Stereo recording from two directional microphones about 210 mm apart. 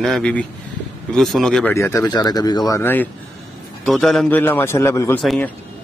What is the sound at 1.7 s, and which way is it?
Speech, 15° left (ahead or behind).